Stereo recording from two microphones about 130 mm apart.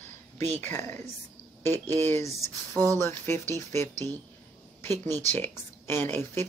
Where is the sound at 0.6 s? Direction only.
15° left (ahead or behind).